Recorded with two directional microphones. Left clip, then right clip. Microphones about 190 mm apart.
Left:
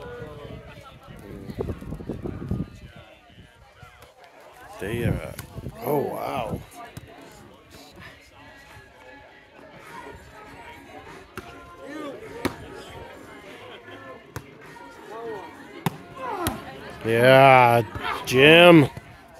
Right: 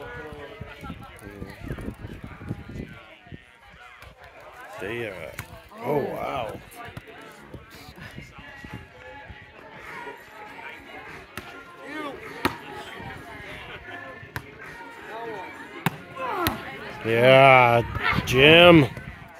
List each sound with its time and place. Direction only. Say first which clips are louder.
4.8 s speech: left 3 dB; 20° left (ahead or behind)
11.9 s chop: right 2 dB; 10° left (ahead or behind)
15.3 s a sound: right 2 dB; 15° left (ahead or behind)
17.0 s speech: even; 15° left (ahead or behind)
17.9 s a sound: right 4 dB; 10° right (ahead or behind)
18.2 s speech: left 1 dB; 10° left (ahead or behind)